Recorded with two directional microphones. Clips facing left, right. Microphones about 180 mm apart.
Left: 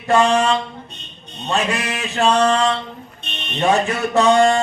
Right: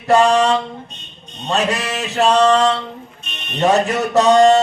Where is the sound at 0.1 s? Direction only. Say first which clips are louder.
Right 2 dB; 40° right (ahead or behind).